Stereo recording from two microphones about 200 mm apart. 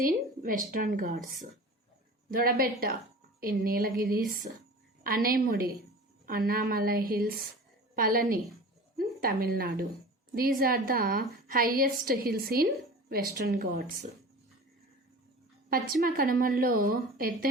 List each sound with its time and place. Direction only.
0.0 s a woman's voice: 45° right (ahead or behind)
2.3 s a woman's voice: 45° right (ahead or behind)
15.7 s a woman's voice: 45° right (ahead or behind)